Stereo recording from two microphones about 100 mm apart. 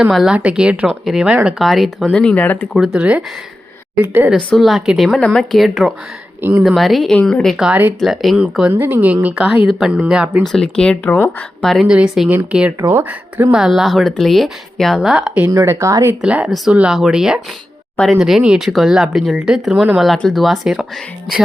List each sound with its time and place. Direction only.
0.1 s a woman's voice: centre (ahead or behind)
2.2 s speech: 15° left (ahead or behind)
2.7 s speech: 5° right (ahead or behind)
4.4 s a woman's voice: 5° left (ahead or behind)
6.4 s speech: 15° right (ahead or behind)
6.7 s a woman's voice: centre (ahead or behind)
7.5 s a woman's voice: 5° right (ahead or behind)
10.4 s a woman's voice: 5° left (ahead or behind)
11.9 s a woman's voice: 5° right (ahead or behind)
15.4 s speech: 25° right (ahead or behind)
16.2 s speech: 15° right (ahead or behind)
17.9 s speech: 10° left (ahead or behind)
18.2 s a woman's voice: 5° right (ahead or behind)